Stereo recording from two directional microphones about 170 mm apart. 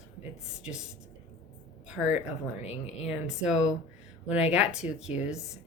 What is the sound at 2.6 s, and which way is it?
Speech, 40° left (ahead or behind).